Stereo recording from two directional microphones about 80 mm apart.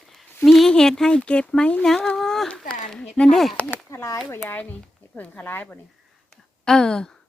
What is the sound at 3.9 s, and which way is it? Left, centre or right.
Speech, left.